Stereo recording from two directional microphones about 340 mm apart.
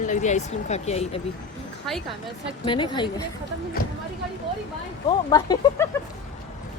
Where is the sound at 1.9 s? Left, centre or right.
Centre.